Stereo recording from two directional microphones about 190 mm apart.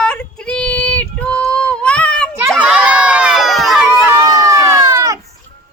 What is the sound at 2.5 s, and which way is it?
Run, 5° right (ahead or behind).